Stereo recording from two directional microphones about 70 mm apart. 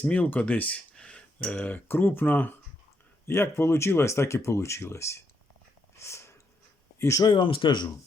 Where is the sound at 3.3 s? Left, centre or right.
Left.